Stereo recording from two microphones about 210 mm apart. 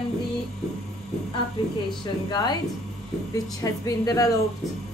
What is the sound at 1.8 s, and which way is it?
Speech, 20° left (ahead or behind).